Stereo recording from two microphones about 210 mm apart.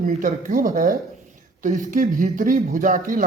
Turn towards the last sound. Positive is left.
turn(degrees=-40)  # may be behind; listen again after turning